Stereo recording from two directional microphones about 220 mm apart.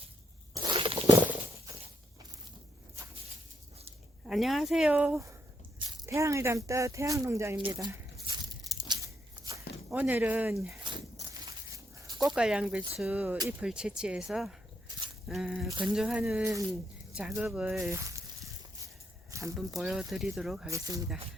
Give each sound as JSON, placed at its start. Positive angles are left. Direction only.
{"t": 0.5, "sound": "a sound", "side_deg": -20}
{"t": 4.3, "sound": "speech", "side_deg": 0}
{"t": 8.3, "sound": "crunch", "side_deg": -20}
{"t": 9.9, "sound": "speech", "side_deg": -5}
{"t": 11.4, "sound": "a sound", "side_deg": -15}
{"t": 12.1, "sound": "speech", "side_deg": 0}
{"t": 16.4, "sound": "speech", "side_deg": -15}
{"t": 17.2, "sound": "speech", "side_deg": -5}
{"t": 19.3, "sound": "a sound", "side_deg": -15}
{"t": 19.5, "sound": "speech", "side_deg": 0}
{"t": 20.7, "sound": "speech", "side_deg": -15}